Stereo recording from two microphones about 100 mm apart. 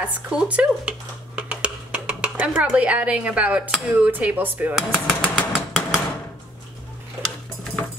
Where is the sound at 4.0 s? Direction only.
15° right (ahead or behind).